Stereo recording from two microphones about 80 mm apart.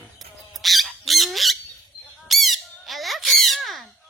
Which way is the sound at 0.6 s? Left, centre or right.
Centre.